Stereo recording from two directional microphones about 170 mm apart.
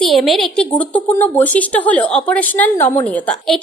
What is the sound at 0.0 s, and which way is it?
A woman's voice, centre (ahead or behind).